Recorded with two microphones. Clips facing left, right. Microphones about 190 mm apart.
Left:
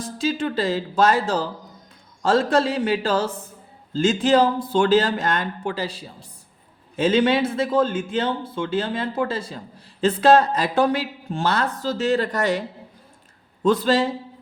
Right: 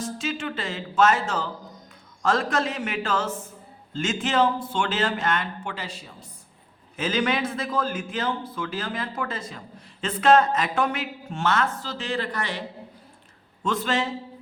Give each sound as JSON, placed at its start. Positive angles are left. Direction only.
{"t": 0.0, "sound": "a man's voice", "side_deg": 35}